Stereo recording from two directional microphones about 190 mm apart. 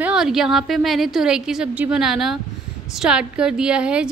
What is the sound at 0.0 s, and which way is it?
A woman's voice, 5° right (ahead or behind).